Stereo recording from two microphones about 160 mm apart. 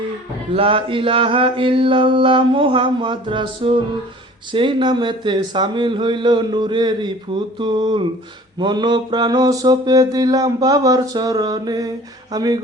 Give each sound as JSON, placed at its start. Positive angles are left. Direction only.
{"t": 0.5, "sound": "mantra", "side_deg": -35}
{"t": 4.5, "sound": "speech", "side_deg": -30}